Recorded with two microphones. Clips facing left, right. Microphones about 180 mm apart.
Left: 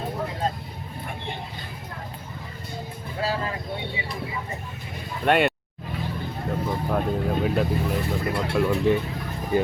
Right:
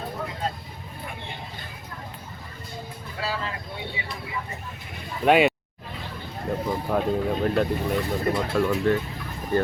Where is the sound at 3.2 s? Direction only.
35° left (ahead or behind).